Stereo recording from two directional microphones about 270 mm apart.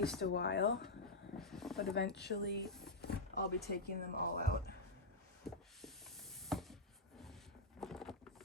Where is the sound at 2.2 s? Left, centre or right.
Left.